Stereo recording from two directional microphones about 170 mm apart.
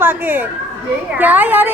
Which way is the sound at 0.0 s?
10° right (ahead or behind).